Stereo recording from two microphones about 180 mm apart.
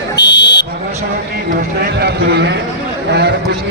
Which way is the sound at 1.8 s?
65° right (ahead or behind).